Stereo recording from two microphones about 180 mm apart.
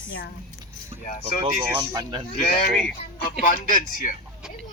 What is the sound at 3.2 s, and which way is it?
Speech, 55° left (ahead or behind).